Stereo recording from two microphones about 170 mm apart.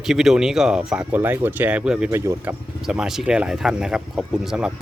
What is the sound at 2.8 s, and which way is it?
Speech, 5° right (ahead or behind).